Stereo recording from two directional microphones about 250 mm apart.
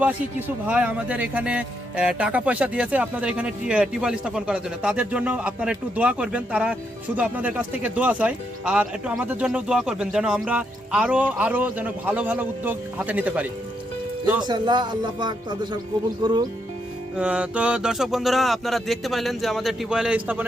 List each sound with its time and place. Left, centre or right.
0.0 s speech: centre
14.4 s speech: centre
17.2 s speech: centre